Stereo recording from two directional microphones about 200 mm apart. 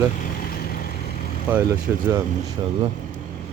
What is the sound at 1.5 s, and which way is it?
Speech, 10° right (ahead or behind).